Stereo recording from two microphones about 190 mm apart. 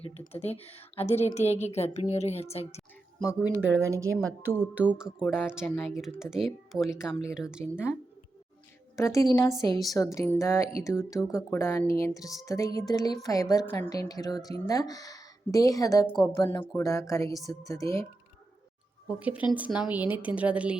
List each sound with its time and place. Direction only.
0.0 s a woman's voice: 35° left (ahead or behind)
3.8 s a woman's voice: 15° right (ahead or behind)
4.1 s speech: 90° right
4.4 s a woman's voice: 10° right (ahead or behind)
9.0 s a woman's voice: 15° left (ahead or behind)
12.5 s music: 15° left (ahead or behind)
13.2 s a woman's voice: 15° left (ahead or behind)
14.1 s music: 20° left (ahead or behind)
14.6 s a woman's voice: 20° left (ahead or behind)
19.0 s a woman's voice: 5° right (ahead or behind)